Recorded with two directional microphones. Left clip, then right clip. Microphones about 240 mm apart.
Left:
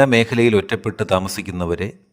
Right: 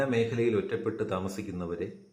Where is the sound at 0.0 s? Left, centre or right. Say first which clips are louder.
Left 13 dB; left.